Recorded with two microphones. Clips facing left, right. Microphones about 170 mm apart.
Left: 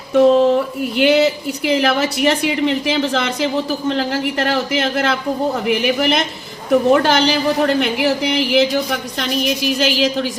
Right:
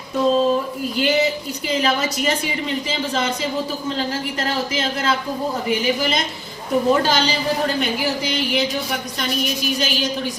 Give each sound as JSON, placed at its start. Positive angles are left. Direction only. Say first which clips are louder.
{"t": 0.1, "sound": "a woman's voice", "louder": "left 6 dB", "side_deg": 75}